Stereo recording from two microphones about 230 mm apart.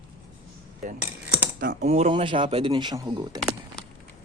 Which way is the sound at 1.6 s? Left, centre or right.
Right.